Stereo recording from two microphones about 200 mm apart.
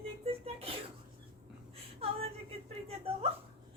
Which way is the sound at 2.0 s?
30° right (ahead or behind).